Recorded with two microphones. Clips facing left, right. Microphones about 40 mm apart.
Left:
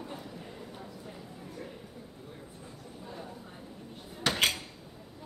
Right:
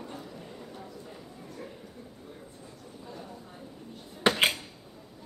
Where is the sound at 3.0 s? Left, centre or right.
Centre.